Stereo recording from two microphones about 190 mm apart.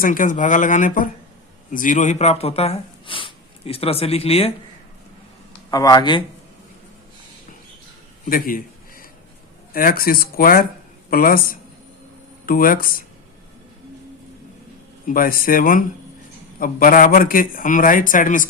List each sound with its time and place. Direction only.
0.0 s a man's voice: 45° left (ahead or behind)
5.7 s speech: 20° left (ahead or behind)
8.2 s a sound: 45° left (ahead or behind)
9.7 s a man's voice: 50° left (ahead or behind)
15.0 s a man's voice: 50° left (ahead or behind)